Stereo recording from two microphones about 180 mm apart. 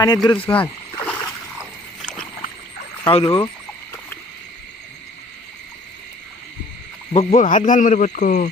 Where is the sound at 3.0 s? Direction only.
35° left (ahead or behind).